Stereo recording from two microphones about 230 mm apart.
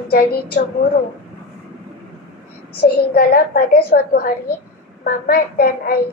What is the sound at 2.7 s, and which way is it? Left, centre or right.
A woman's voice, left.